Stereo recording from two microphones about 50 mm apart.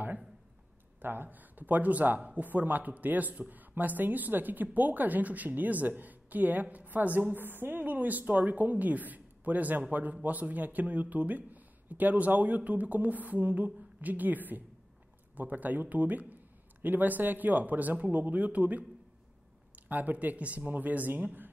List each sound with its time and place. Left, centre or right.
1.0 s speech: right